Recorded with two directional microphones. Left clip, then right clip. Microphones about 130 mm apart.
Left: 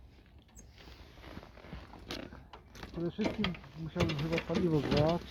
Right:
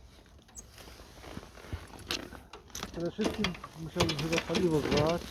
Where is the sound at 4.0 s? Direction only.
50° left (ahead or behind).